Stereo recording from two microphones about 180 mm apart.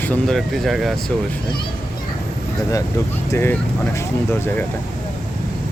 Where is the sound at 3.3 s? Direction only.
15° left (ahead or behind).